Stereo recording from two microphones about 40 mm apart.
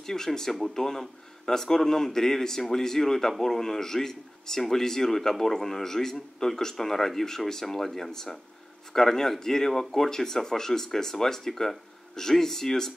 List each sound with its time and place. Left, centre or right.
0.0 s speech: centre